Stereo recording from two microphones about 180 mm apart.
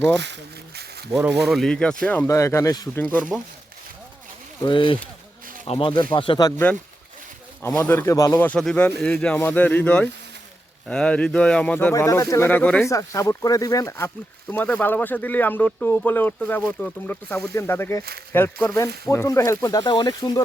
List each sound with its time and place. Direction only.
1.5 s speech: centre (ahead or behind); by 3.0 s 20° left (ahead or behind)
3.0 s speech: 10° left (ahead or behind)
4.6 s speech: 25° left (ahead or behind)
7.6 s speech: 15° left (ahead or behind)
8.4 s speech: 5° left (ahead or behind)
12.9 s speech: 15° left (ahead or behind)